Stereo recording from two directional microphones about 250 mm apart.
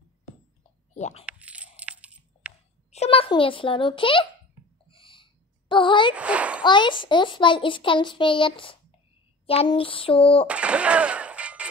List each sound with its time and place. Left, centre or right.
0.9 s speech: left
1.2 s coin: centre
2.9 s a child's voice: left
4.8 s a sound: left
6.1 s a child's voice: centre
6.6 s a child's voice: centre
10.4 s speech: centre